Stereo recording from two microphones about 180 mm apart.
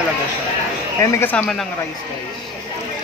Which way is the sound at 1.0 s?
10° left (ahead or behind).